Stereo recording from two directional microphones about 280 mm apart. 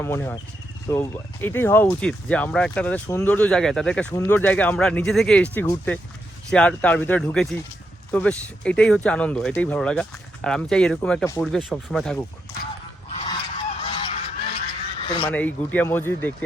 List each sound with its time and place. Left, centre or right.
0.0 s speech: centre
13.1 s goose: centre
14.9 s duck: centre
15.3 s speech: centre